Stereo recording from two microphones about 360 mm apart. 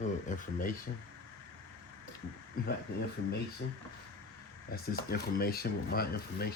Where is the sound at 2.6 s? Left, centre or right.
Left.